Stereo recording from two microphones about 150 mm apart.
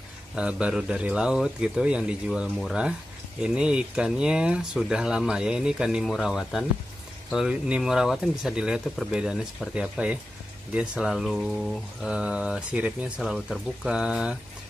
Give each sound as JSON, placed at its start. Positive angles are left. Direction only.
{"t": 0.4, "sound": "a man's voice", "side_deg": -5}